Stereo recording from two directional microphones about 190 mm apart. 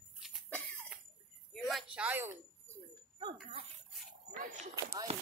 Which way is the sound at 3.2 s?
30° right (ahead or behind).